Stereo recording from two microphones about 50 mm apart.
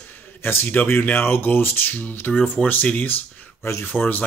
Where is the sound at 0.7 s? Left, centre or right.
Left.